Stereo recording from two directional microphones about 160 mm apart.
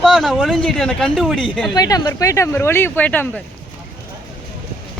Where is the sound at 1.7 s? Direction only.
25° left (ahead or behind).